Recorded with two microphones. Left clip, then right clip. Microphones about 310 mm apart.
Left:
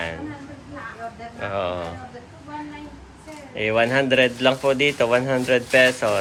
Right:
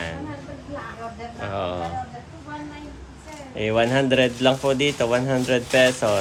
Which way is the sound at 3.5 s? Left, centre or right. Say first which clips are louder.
Left 1 dB; centre.